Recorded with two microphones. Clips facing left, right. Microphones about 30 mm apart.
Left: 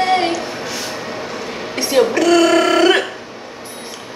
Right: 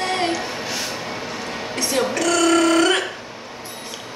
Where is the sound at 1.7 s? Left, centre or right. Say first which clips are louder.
Left 7 dB; left.